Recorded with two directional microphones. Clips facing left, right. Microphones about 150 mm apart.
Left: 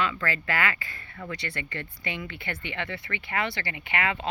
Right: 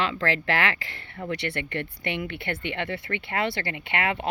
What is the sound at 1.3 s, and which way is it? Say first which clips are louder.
Speech: right 6 dB; 65° right (ahead or behind).